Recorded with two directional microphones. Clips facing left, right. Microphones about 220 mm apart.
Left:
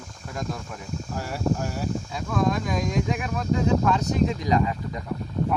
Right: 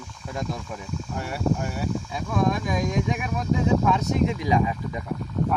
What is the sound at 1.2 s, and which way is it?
Speech, centre (ahead or behind).